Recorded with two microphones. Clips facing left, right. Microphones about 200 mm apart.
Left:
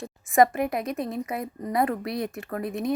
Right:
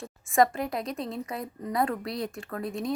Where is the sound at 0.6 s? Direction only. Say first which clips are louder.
Left 4 dB; centre (ahead or behind).